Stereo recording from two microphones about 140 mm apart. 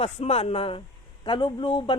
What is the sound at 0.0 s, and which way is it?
A man's voice, 45° left (ahead or behind).